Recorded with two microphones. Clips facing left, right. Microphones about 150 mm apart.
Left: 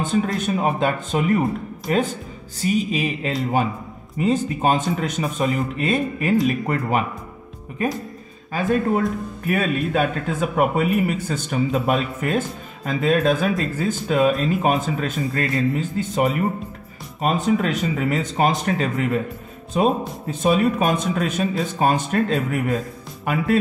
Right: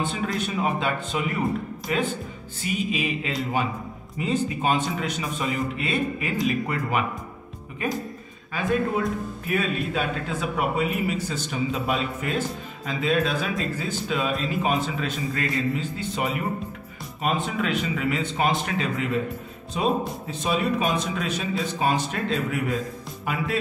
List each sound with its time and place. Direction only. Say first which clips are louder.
0.0 s a man's voice: left 5 dB; 45° left (ahead or behind)
9.5 s a man's voice: left 5 dB; 50° left (ahead or behind)